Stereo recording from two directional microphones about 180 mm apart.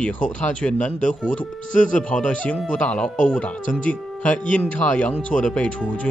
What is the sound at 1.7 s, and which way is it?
Speech, 45° left (ahead or behind).